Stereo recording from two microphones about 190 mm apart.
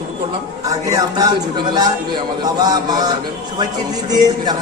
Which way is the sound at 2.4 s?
20° right (ahead or behind).